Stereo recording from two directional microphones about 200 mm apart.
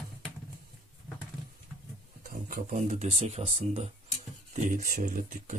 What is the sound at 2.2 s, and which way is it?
Speech, 40° right (ahead or behind).